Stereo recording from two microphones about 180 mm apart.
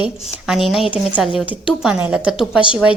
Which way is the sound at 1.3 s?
30° left (ahead or behind).